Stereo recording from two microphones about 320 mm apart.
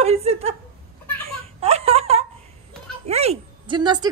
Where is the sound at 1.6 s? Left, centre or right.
Centre.